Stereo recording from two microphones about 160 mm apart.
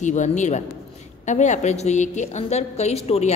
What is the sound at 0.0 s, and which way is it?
A man's voice, 50° left (ahead or behind).